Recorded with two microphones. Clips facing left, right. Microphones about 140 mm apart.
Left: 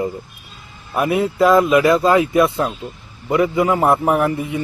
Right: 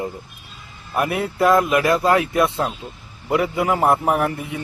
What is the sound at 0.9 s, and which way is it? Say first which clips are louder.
Speech: left 4 dB; centre (ahead or behind).